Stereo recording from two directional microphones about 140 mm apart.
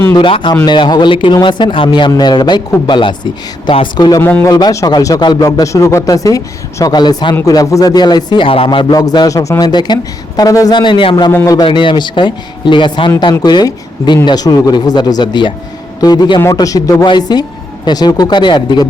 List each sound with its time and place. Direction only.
0.1 s speech: 35° left (ahead or behind)
4.2 s speech: 15° left (ahead or behind)
4.5 s speech: 25° left (ahead or behind)
11.3 s speech: 15° left (ahead or behind)
11.5 s speech: 35° left (ahead or behind)